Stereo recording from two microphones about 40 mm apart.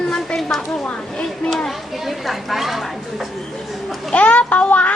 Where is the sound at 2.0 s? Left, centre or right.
Centre.